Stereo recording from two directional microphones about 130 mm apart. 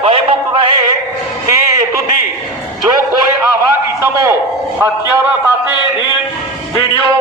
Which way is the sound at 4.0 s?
25° right (ahead or behind).